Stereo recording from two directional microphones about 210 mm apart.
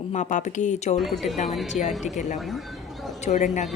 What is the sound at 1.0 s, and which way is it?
Speech, centre (ahead or behind).